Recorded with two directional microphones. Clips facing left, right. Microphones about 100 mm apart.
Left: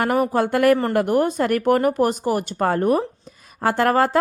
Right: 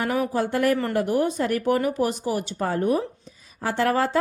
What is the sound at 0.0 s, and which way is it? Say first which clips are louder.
Speech: left 5 dB; 60° left (ahead or behind).